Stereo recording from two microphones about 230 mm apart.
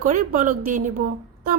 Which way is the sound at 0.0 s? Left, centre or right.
Right.